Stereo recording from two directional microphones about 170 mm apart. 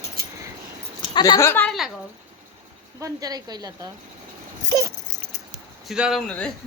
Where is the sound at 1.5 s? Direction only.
10° left (ahead or behind).